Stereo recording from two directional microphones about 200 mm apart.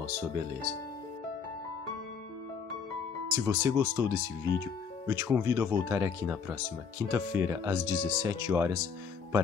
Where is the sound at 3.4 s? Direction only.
15° right (ahead or behind).